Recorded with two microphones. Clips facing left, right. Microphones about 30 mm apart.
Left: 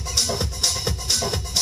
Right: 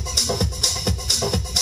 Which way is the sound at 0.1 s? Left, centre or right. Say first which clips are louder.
Right 1 dB; centre.